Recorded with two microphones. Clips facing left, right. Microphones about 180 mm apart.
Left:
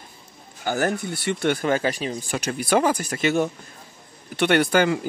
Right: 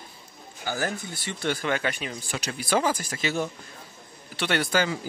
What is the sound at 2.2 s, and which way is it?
Speech, 50° left (ahead or behind).